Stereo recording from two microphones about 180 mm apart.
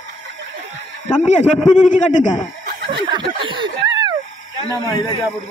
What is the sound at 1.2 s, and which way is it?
Speech, 40° left (ahead or behind).